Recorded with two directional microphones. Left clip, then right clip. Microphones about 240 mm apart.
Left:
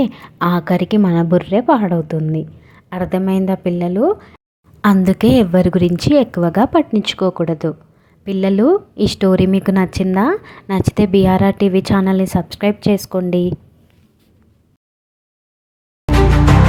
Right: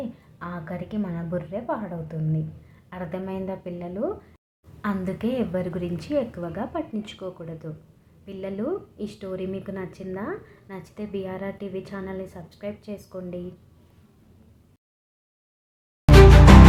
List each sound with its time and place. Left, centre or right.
0.0 s a woman's voice: left
16.1 s music: centre